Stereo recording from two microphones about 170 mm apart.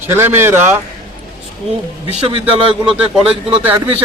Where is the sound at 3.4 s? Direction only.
10° right (ahead or behind).